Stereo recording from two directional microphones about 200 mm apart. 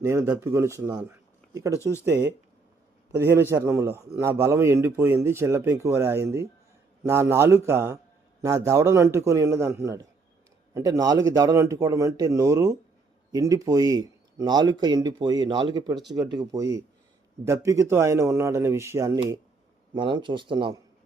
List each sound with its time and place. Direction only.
0.0 s a man's voice: 15° right (ahead or behind)
20.0 s speech: 25° right (ahead or behind)